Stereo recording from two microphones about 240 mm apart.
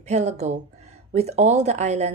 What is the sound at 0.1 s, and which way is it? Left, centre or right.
Speech, right.